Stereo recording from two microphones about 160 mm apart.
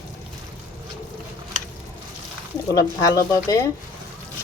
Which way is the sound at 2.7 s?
20° left (ahead or behind).